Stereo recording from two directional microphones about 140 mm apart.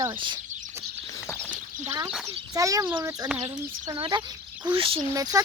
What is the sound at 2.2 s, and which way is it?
Speech, 25° right (ahead or behind).